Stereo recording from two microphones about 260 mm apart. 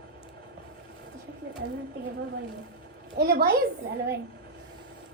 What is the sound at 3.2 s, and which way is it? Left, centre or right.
Speech, right.